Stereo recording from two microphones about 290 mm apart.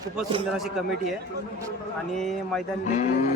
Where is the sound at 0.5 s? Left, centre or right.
Centre.